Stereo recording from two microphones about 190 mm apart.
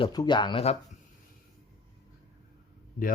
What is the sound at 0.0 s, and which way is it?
Speech, 20° left (ahead or behind).